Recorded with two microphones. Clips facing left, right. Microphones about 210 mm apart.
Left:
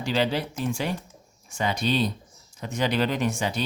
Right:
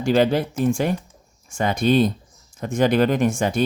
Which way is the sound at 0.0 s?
50° right (ahead or behind).